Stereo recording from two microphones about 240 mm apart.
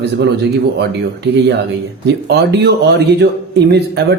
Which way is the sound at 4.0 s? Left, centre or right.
Right.